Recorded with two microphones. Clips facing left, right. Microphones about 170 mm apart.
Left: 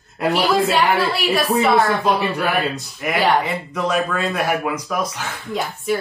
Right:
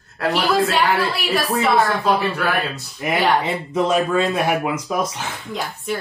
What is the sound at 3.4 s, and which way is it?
Speech, 25° right (ahead or behind).